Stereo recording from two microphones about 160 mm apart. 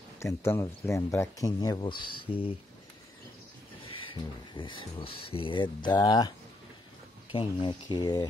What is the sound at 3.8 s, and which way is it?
Speech, 35° left (ahead or behind).